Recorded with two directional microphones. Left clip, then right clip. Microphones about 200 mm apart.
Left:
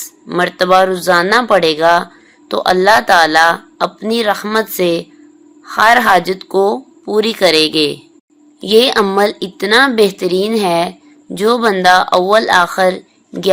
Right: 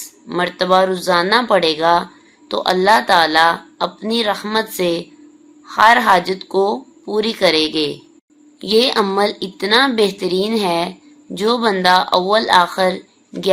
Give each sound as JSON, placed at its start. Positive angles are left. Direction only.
{"t": 0.0, "sound": "speech", "side_deg": 25}